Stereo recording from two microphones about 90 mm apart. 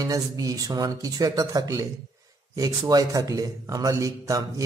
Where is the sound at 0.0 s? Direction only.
40° right (ahead or behind).